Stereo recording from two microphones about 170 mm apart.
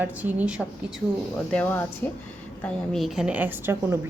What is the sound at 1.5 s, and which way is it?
A woman's voice, 10° left (ahead or behind).